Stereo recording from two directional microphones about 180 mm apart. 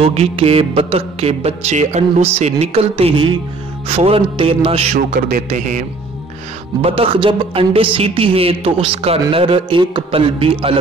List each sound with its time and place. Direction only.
0.0 s music: 35° right (ahead or behind)
5.1 s a man's voice: 45° right (ahead or behind)
6.8 s music: 30° right (ahead or behind)